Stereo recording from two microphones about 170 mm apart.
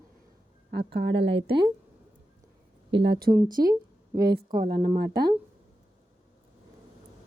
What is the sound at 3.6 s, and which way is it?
A woman's voice, 20° right (ahead or behind).